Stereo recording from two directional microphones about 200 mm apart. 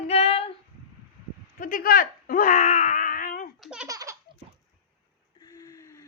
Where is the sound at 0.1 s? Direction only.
30° left (ahead or behind).